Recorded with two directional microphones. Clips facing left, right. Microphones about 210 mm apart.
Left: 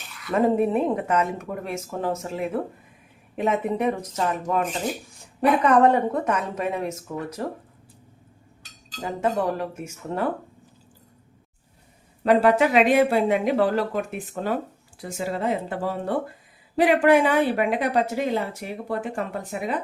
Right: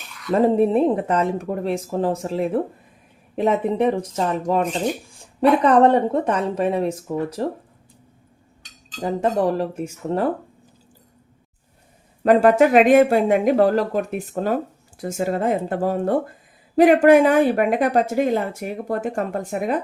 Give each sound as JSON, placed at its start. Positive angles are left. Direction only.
{"t": 0.3, "sound": "speech", "side_deg": -30}
{"t": 9.0, "sound": "speech", "side_deg": -35}
{"t": 12.2, "sound": "speech", "side_deg": -45}